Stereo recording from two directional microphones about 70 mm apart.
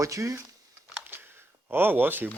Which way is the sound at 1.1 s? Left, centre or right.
Right.